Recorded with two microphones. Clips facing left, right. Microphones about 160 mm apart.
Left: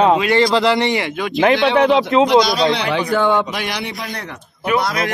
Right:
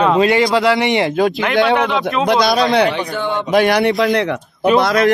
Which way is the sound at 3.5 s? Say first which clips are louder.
Right 12 dB; 50° right (ahead or behind).